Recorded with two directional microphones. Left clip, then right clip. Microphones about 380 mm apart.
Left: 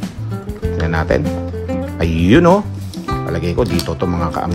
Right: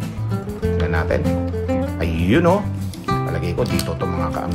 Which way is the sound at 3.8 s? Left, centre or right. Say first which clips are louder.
Left 4 dB; left.